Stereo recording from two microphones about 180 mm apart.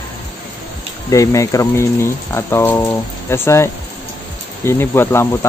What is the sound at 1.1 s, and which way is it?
Speech, 15° left (ahead or behind).